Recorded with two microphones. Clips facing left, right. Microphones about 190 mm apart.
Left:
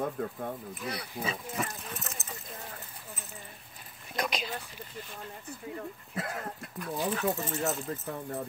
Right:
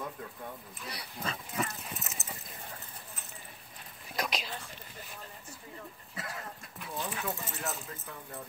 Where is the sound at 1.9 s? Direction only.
Centre (ahead or behind).